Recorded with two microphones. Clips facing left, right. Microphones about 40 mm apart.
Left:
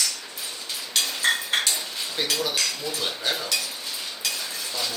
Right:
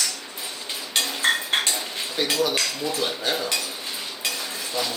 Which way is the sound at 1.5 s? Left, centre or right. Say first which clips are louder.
Right 1 dB; centre.